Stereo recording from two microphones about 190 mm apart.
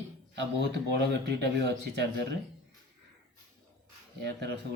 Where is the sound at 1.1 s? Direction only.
65° right (ahead or behind).